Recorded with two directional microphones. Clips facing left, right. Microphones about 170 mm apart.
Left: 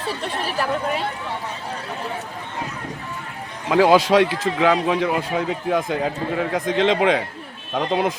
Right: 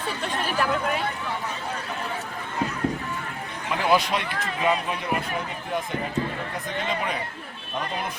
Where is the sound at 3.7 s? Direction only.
90° left.